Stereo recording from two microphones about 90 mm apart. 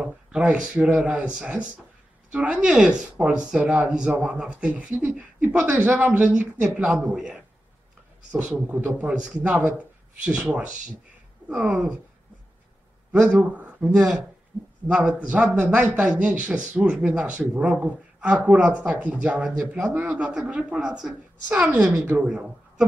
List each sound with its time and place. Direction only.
0.0 s a man's voice: 10° right (ahead or behind)
9.0 s a man's voice: 10° right (ahead or behind)
11.4 s a man's voice: 15° right (ahead or behind)
13.1 s a man's voice: 15° right (ahead or behind)